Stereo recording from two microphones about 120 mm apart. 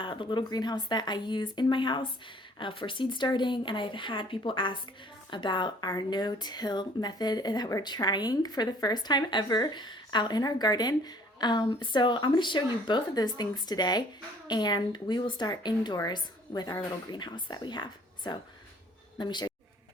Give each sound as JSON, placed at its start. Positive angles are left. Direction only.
{"t": 0.0, "sound": "speech", "side_deg": 45}